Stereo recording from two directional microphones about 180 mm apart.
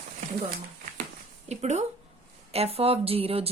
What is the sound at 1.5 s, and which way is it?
A woman's voice, 40° right (ahead or behind).